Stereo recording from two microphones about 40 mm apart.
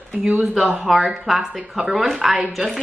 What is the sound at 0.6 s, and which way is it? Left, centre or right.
Speech, centre.